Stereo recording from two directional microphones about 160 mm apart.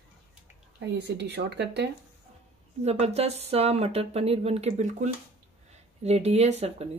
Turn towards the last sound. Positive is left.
turn(degrees=-40)  # may be behind; listen again after turning